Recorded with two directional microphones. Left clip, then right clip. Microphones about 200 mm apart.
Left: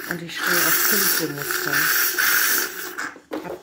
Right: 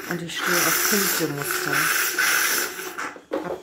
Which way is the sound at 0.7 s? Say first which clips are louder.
Left 1 dB; 45° left (ahead or behind).